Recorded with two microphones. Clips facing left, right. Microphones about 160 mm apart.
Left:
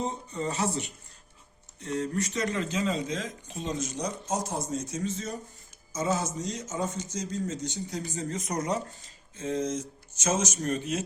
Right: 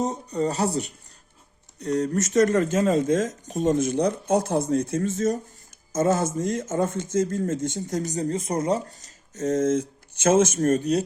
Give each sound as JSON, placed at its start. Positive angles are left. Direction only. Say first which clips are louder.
{"t": 0.0, "sound": "speech", "louder": "right 7 dB", "side_deg": -40}
{"t": 9.0, "sound": "speech", "louder": "right 8 dB", "side_deg": -40}